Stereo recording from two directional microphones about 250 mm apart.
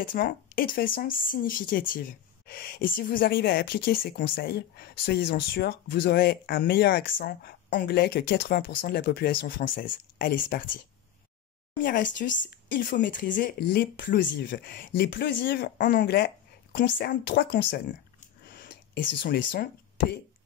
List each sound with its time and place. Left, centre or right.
0.0 s speech: left
11.8 s speech: left
18.2 s a sound: left